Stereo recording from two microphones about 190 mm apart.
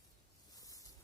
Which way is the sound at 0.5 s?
20° left (ahead or behind).